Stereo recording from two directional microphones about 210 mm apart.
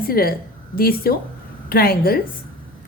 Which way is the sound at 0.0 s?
45° left (ahead or behind).